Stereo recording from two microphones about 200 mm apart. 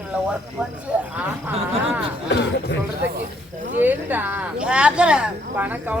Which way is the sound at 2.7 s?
60° left (ahead or behind).